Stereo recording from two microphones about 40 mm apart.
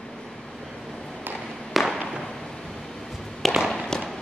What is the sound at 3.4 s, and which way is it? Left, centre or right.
Fireworks, centre.